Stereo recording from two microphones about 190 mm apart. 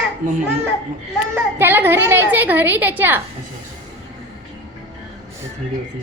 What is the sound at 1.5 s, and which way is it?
A woman's voice, 10° right (ahead or behind).